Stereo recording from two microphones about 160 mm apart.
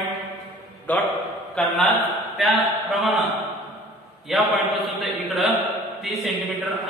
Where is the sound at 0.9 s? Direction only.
10° left (ahead or behind).